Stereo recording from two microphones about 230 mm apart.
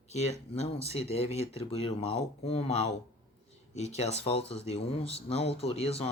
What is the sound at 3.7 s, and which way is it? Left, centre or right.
Speech, left.